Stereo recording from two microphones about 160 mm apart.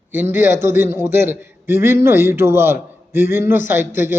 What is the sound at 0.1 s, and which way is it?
A man's voice, 10° right (ahead or behind).